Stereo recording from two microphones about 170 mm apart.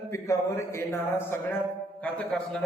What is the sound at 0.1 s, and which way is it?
A man's voice, 15° left (ahead or behind).